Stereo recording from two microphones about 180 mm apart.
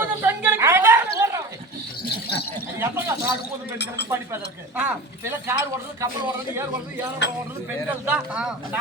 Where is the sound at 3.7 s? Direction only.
75° left (ahead or behind).